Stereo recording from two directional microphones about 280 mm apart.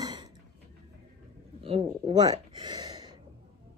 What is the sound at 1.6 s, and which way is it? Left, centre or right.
Speech, centre.